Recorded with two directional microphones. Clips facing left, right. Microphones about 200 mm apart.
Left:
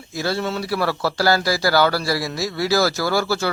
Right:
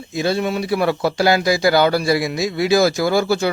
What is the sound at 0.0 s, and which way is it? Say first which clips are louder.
Speech: right 4 dB; 20° right (ahead or behind).